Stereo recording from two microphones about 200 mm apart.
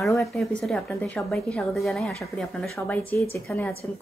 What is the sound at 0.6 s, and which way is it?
Speech, 5° left (ahead or behind).